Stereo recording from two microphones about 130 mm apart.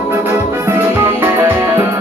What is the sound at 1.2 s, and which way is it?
Music, 20° right (ahead or behind).